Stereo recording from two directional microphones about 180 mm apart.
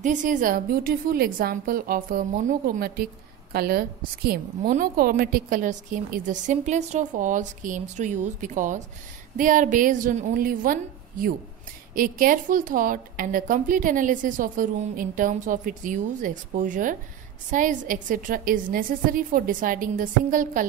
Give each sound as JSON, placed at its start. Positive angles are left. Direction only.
{"t": 0.0, "sound": "a woman's voice", "side_deg": -45}
{"t": 11.9, "sound": "a woman's voice", "side_deg": -50}